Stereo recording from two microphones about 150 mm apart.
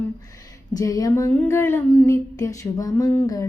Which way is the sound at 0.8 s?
25° left (ahead or behind).